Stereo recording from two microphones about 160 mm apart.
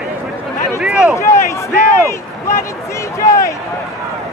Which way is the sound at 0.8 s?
5° right (ahead or behind).